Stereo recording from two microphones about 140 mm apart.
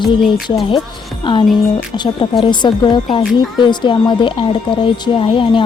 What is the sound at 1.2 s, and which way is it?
Speech, 40° left (ahead or behind).